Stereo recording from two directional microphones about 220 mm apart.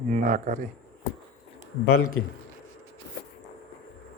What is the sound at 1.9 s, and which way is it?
Speech, 80° left.